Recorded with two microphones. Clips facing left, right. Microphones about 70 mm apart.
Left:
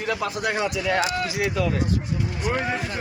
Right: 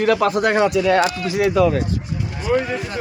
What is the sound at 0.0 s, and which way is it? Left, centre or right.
Speech, right.